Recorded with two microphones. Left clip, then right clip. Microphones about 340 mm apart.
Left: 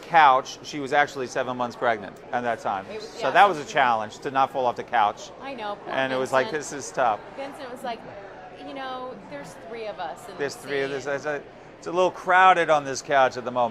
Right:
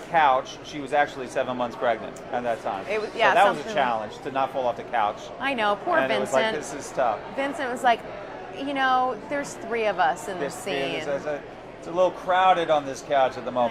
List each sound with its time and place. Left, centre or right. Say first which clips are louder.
0.1 s a man's voice: left 3 dB; left
5.4 s a woman's voice: right 9 dB; right
5.9 s speech: left 2 dB; left
7.8 s a woman's voice: right 13 dB; right
10.4 s a man's voice: left 2 dB; left